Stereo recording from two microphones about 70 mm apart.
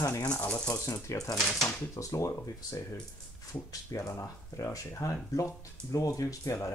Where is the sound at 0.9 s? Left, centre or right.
Left.